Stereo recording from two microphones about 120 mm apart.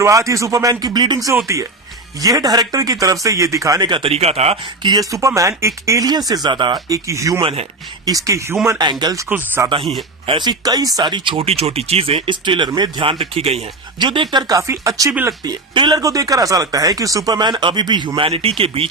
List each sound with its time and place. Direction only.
0.0 s speech: 25° right (ahead or behind)
1.5 s speech: 25° right (ahead or behind); by 4.1 s 40° right (ahead or behind)
4.1 s speech: 60° right (ahead or behind)
4.8 s speech: 35° right (ahead or behind)
7.4 s speech: 55° right (ahead or behind)
8.0 s speech: 25° right (ahead or behind)
9.6 s speech: 25° right (ahead or behind)
10.2 s speech: 40° right (ahead or behind); by 13.6 s 55° right (ahead or behind)
14.0 s speech: 40° right (ahead or behind)
15.4 s speech: 40° right (ahead or behind)